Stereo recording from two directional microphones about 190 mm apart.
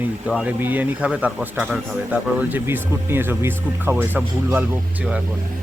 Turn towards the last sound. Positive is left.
turn(degrees=-10)  # may be behind; listen again after turning